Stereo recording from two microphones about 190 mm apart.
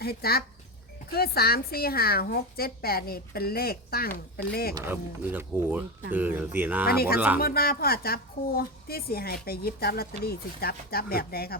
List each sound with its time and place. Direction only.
0.0 s speech: 55° left (ahead or behind)
4.7 s speech: 10° right (ahead or behind)
6.8 s speech: 55° left (ahead or behind)